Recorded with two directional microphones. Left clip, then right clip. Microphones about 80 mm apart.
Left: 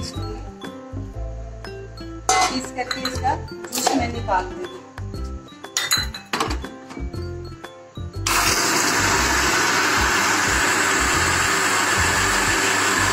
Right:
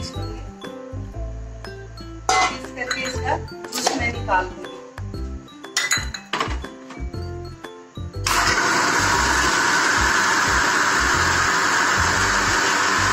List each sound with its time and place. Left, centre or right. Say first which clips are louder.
2.2 s music: even; right
3.7 s chopping: left 1 dB; right
5.8 s chink: even; right
8.3 s a sound: right 1 dB; right